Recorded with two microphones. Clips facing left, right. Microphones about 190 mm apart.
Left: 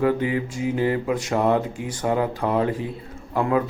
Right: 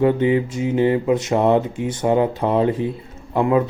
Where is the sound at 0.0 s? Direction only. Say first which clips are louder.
Right 5 dB; 25° right (ahead or behind).